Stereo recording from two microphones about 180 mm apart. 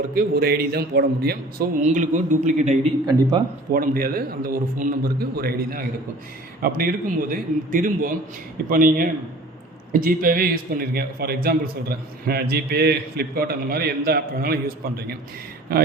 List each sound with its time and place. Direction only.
0.1 s a man's voice: 55° right (ahead or behind)
1.8 s a man's voice: 40° right (ahead or behind)
3.7 s a man's voice: 50° right (ahead or behind)